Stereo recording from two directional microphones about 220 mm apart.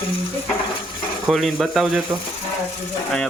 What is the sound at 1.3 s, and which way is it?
Speech, centre (ahead or behind).